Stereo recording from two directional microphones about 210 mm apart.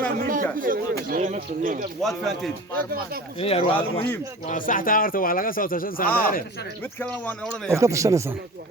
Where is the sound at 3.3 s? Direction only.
25° left (ahead or behind).